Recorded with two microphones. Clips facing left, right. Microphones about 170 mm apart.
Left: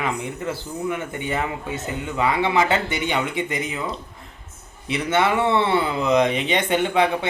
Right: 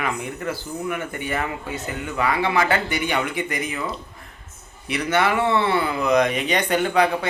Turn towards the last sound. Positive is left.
turn(degrees=25)  # may be behind; listen again after turning